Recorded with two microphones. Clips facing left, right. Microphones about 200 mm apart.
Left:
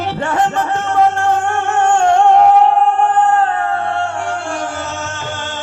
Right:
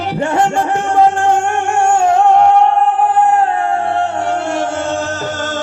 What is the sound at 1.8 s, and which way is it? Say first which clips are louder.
Music: even; 10° right (ahead or behind).